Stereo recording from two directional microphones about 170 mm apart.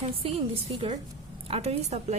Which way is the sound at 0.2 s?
35° right (ahead or behind).